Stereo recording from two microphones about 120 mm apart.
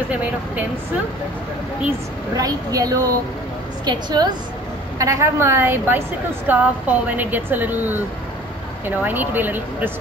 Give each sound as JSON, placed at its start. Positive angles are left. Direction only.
{"t": 0.1, "sound": "a woman's voice", "side_deg": -15}
{"t": 2.3, "sound": "a woman's voice", "side_deg": -30}
{"t": 4.9, "sound": "a woman's voice", "side_deg": -25}